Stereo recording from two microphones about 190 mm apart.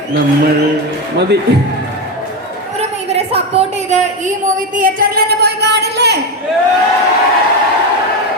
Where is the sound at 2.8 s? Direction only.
35° right (ahead or behind); by 6.1 s 60° right (ahead or behind).